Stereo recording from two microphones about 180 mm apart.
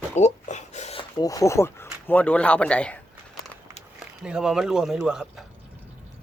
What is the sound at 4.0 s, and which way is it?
Speech, 5° right (ahead or behind).